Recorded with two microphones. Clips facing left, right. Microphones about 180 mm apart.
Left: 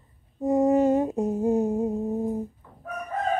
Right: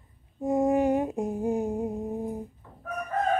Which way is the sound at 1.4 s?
15° right (ahead or behind).